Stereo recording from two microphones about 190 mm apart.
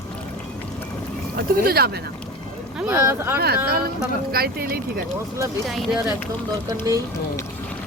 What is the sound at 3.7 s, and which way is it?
Speech, 50° right (ahead or behind).